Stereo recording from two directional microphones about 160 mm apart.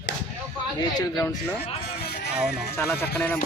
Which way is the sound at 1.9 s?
90° left.